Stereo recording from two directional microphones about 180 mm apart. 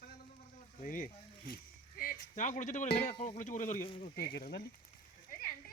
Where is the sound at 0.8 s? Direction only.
50° left (ahead or behind).